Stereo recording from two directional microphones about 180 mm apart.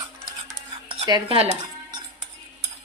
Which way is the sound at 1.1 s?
30° right (ahead or behind).